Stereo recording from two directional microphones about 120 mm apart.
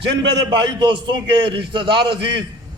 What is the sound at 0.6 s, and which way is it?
A man's voice, 40° right (ahead or behind).